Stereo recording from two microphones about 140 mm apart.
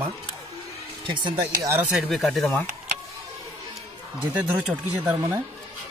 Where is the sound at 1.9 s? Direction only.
Centre (ahead or behind).